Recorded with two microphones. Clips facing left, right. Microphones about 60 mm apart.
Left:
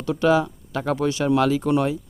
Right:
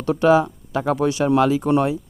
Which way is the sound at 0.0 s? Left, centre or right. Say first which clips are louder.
Right 3 dB; right.